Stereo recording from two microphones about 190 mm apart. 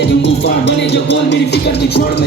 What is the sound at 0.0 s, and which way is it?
Music, 65° left (ahead or behind).